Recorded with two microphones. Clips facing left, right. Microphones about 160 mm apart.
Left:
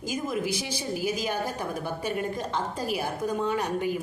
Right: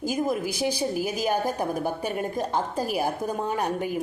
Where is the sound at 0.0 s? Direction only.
45° right (ahead or behind).